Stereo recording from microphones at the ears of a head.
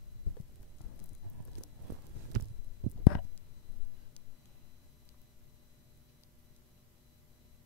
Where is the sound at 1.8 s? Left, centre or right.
Right.